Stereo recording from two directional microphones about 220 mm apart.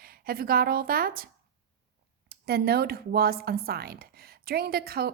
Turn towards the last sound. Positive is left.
turn(degrees=-45)  # may be behind; listen again after turning